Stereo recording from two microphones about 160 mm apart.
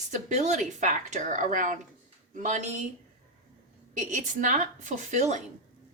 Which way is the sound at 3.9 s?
50° right (ahead or behind).